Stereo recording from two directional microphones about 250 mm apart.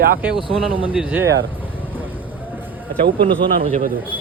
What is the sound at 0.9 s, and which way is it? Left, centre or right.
Speech, centre.